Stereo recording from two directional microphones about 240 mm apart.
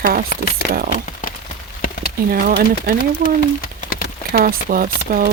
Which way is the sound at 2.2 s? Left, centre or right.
Right.